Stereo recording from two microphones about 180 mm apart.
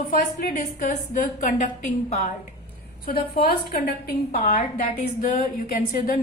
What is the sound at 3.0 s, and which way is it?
Speech, 55° left (ahead or behind).